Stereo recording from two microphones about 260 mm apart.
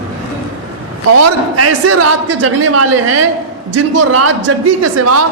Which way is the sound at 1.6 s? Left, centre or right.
Right.